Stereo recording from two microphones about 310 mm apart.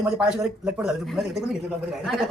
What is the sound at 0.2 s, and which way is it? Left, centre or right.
A man's voice, centre.